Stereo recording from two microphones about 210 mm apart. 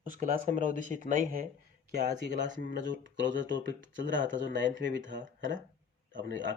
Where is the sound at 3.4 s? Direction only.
60° right (ahead or behind).